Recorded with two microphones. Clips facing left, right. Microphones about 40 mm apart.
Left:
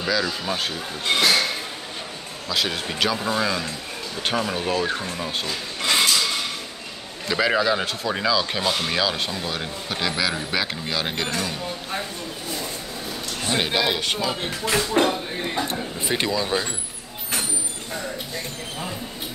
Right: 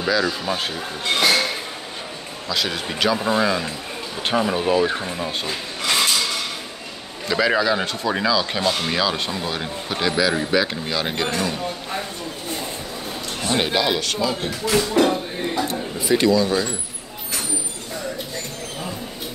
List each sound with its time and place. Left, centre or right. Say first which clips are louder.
0.0 s speech: right 3 dB; centre
2.4 s speech: right 1 dB; centre
3.2 s speech: right 4 dB; centre
5.8 s a sound: even; centre
7.2 s speech: right 2 dB; centre
13.5 s speech: right 2 dB; centre
14.0 s speech: right 2 dB; left